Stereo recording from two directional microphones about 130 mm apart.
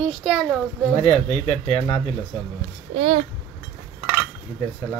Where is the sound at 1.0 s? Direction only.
55° left (ahead or behind).